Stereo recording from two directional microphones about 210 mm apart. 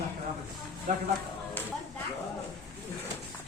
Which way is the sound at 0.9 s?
35° right (ahead or behind).